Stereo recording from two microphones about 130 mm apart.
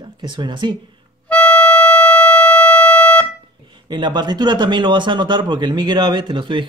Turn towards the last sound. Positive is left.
turn(degrees=-40)  # may be behind; listen again after turning